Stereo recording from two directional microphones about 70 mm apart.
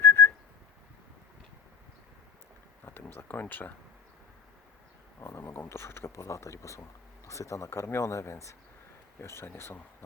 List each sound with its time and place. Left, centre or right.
0.0 s whistling: left
2.8 s a sound: left
3.4 s speech: left
5.2 s speech: left
7.7 s speech: left